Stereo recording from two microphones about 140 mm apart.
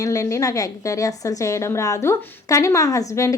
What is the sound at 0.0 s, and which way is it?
A woman's voice, 25° left (ahead or behind).